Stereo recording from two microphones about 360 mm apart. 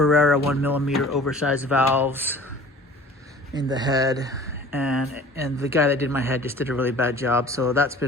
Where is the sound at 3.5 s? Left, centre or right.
Centre.